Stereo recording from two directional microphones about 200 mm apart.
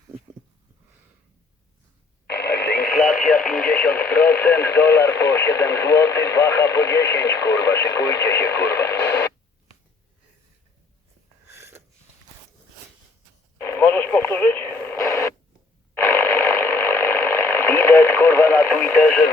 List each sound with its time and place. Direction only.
2.2 s radio: 50° left (ahead or behind)
2.9 s radio: centre (ahead or behind)
11.5 s a sound: 15° right (ahead or behind)
13.6 s radio: 15° left (ahead or behind)
16.0 s ratchet: 15° left (ahead or behind)